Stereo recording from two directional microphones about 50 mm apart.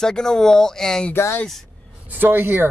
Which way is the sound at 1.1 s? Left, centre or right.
Left.